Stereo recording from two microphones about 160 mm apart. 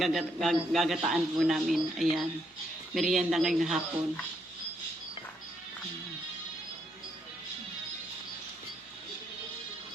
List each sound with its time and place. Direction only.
0.0 s a man's voice: centre (ahead or behind)